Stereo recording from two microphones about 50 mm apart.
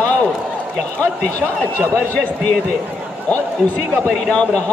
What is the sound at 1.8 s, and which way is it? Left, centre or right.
Speech, right.